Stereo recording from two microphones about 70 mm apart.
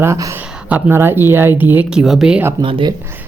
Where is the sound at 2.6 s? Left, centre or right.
Right.